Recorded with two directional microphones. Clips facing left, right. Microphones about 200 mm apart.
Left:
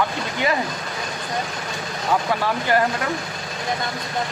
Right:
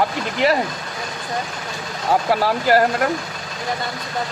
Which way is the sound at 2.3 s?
40° right (ahead or behind).